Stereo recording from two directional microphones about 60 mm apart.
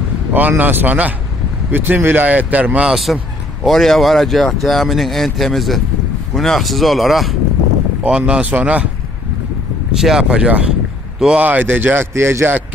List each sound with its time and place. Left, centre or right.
0.3 s speech: right
2.2 s speech: right
2.9 s speech: centre
8.0 s speech: right
9.9 s speech: centre
11.3 s speech: right
12.1 s speech: right